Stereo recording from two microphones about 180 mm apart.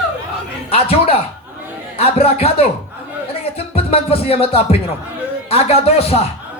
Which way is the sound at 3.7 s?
35° left (ahead or behind).